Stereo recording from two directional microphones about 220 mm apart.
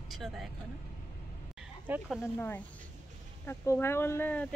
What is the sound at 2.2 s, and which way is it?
Speech, 10° left (ahead or behind).